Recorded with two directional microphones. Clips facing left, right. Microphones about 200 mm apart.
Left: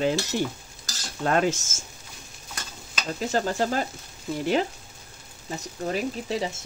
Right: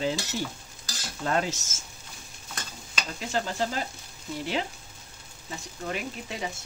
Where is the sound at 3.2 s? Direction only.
45° left (ahead or behind).